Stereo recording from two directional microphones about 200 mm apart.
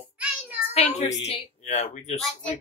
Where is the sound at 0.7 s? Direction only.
30° left (ahead or behind).